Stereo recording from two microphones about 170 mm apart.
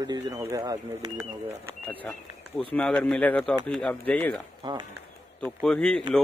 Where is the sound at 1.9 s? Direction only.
10° left (ahead or behind).